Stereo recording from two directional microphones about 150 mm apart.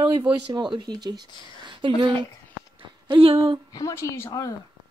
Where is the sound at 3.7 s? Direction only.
20° left (ahead or behind).